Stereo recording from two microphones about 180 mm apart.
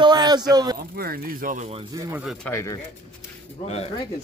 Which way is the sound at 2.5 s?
15° left (ahead or behind).